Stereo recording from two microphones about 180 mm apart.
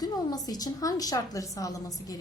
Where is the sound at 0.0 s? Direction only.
20° left (ahead or behind).